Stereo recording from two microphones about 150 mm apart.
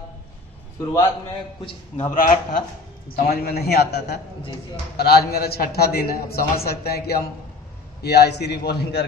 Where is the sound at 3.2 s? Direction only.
90° left.